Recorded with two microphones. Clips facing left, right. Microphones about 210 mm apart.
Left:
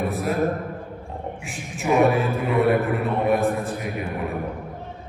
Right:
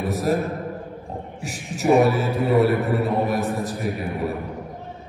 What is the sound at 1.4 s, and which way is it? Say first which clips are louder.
A man's voice: right 4 dB; 40° right (ahead or behind).